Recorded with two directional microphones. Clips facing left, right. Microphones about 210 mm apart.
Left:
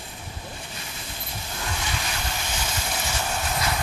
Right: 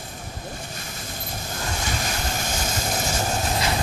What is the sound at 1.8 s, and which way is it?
Vehicle, 45° right (ahead or behind).